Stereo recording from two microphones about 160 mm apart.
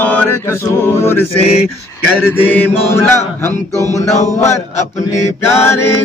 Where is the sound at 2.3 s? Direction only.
15° left (ahead or behind).